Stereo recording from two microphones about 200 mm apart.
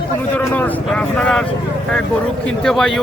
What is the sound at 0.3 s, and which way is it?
A man's voice, 10° left (ahead or behind).